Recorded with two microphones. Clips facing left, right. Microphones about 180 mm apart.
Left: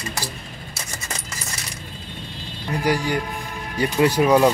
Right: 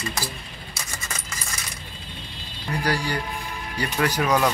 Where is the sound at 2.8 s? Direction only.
20° left (ahead or behind).